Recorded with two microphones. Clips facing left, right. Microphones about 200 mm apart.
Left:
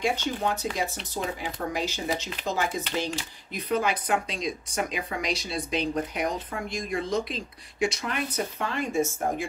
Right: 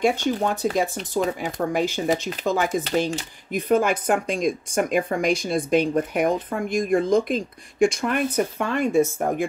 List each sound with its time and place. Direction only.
0.0 s speech: 50° right (ahead or behind)